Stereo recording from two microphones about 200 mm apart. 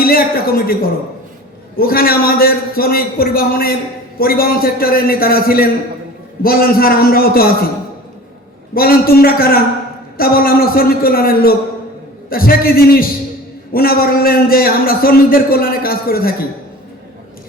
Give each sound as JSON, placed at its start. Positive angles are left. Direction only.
{"t": 0.0, "sound": "a man's voice", "side_deg": 45}
{"t": 8.7, "sound": "a man's voice", "side_deg": 50}